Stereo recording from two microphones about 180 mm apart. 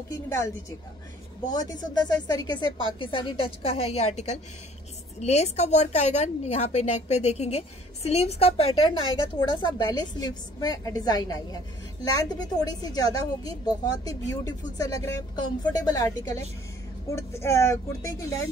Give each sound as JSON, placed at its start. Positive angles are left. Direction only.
{"t": 0.1, "sound": "a woman's voice", "side_deg": 15}